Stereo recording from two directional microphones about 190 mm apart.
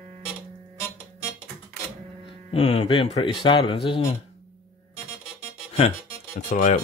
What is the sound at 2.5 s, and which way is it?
Speech, 30° left (ahead or behind).